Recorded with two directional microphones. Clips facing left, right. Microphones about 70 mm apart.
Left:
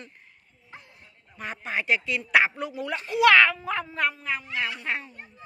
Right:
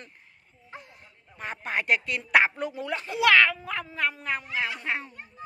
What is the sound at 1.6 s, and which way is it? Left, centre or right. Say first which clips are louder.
Speech: even; right.